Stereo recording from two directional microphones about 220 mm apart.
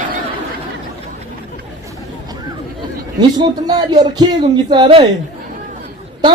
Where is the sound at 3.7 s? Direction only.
20° right (ahead or behind).